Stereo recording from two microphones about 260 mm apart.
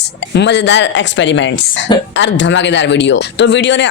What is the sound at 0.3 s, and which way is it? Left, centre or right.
Speech, left.